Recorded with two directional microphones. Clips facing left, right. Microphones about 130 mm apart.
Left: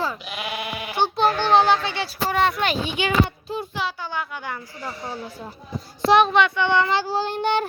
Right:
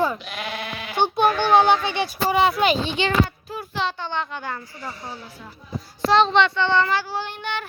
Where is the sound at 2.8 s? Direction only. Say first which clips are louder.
Right 1 dB; 10° left (ahead or behind).